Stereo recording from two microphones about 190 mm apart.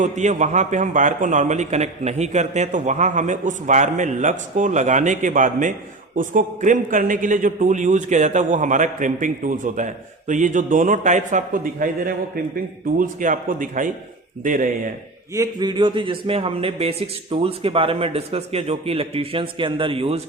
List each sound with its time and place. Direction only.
0.0 s a man's voice: 40° right (ahead or behind)
15.3 s speech: 20° right (ahead or behind)